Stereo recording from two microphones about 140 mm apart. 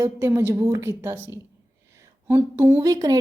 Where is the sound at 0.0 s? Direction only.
20° right (ahead or behind).